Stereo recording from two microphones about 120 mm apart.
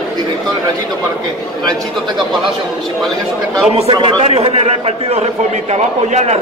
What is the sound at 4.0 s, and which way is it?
A man's voice, 45° right (ahead or behind).